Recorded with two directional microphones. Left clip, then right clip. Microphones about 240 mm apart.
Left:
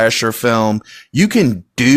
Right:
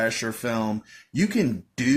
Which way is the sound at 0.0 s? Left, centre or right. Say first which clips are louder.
Left 12 dB; left.